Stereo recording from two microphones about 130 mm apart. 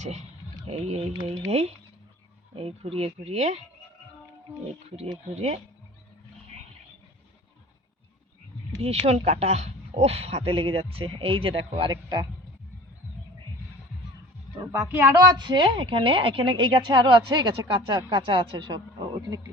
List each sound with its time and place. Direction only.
0.0 s speech: 60° right (ahead or behind)
5.3 s speech: 55° right (ahead or behind)
8.8 s speech: 55° right (ahead or behind); by 12.3 s 30° right (ahead or behind)
14.9 s speech: 20° right (ahead or behind)
15.4 s a woman's voice: 35° right (ahead or behind)